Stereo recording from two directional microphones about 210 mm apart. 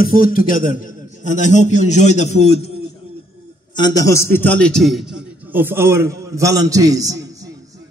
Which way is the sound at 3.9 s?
15° left (ahead or behind).